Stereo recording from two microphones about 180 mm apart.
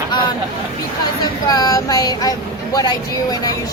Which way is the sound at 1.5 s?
20° left (ahead or behind).